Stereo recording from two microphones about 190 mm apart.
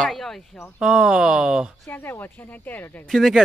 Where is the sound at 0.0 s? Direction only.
Centre (ahead or behind).